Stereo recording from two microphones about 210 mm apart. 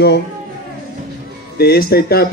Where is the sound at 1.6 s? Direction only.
50° left (ahead or behind).